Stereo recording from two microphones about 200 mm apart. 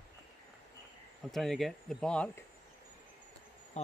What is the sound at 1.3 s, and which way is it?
Speech, centre (ahead or behind).